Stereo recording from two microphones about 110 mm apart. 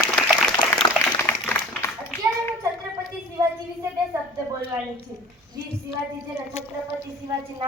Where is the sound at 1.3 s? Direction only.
25° left (ahead or behind).